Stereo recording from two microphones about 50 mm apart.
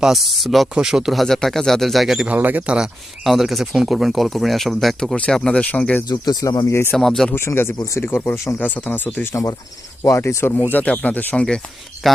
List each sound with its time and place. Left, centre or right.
0.1 s speech: centre
0.8 s speech: centre
1.1 s speech: centre
2.3 s speech: right
3.2 s speech: centre
5.3 s speech: centre
6.4 s speech: left
6.9 s speech: centre
7.3 s speech: left
8.6 s speech: left
10.2 s speech: left
10.5 s speech: left
11.3 s speech: centre
12.0 s speech: centre